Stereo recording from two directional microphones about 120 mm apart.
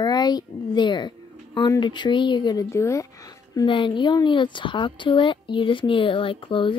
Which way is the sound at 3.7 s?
45° left (ahead or behind).